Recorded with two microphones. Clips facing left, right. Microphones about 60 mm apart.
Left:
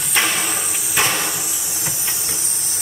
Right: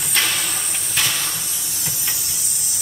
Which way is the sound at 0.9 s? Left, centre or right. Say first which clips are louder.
Left 4 dB; left.